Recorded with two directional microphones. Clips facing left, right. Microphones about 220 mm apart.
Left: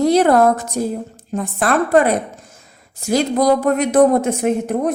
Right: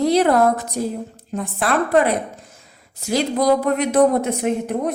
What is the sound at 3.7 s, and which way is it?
Speech, 45° left (ahead or behind).